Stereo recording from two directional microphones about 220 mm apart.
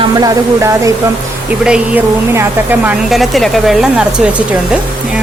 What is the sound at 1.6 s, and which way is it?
Speech, 5° right (ahead or behind).